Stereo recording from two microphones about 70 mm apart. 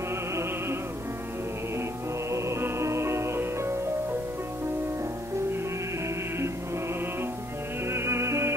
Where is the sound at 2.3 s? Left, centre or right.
Right.